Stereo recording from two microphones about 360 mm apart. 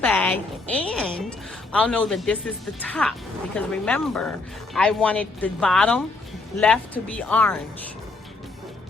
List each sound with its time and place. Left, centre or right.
0.0 s speech: centre